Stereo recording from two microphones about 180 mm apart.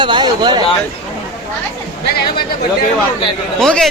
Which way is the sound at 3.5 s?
5° left (ahead or behind).